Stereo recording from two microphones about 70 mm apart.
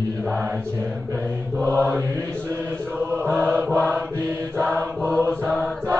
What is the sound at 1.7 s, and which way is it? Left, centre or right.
Mantra, right.